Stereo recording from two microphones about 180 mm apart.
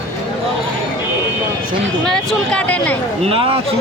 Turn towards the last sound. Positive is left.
turn(degrees=-30)  # may be behind; listen again after turning